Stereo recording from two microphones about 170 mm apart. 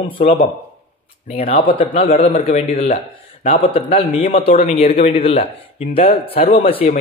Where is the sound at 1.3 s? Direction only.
35° left (ahead or behind).